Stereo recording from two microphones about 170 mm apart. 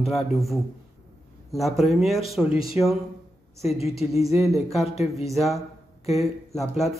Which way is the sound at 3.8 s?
35° left (ahead or behind).